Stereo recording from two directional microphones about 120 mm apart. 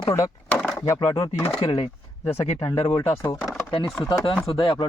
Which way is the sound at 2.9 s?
25° left (ahead or behind).